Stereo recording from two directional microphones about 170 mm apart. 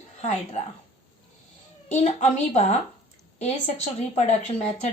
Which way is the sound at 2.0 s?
40° left (ahead or behind).